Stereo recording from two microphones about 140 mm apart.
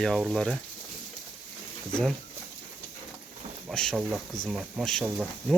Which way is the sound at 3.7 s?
5° left (ahead or behind).